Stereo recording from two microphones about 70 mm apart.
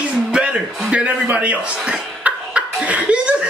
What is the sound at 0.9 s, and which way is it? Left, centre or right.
Cough, centre.